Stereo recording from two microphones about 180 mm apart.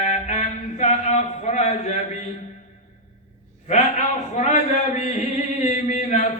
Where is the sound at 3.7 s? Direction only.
40° left (ahead or behind).